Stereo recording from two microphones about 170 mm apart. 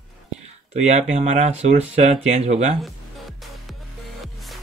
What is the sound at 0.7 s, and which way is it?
Speech, 40° right (ahead or behind).